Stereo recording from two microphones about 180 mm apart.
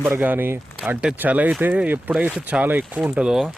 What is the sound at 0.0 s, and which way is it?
Speech, 10° right (ahead or behind).